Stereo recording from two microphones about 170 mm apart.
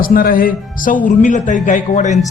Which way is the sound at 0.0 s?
60° left (ahead or behind).